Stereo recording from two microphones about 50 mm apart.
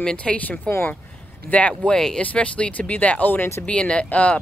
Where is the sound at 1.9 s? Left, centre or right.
Centre.